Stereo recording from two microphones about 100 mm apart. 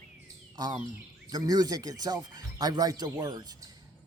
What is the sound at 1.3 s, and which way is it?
Speech, 40° right (ahead or behind).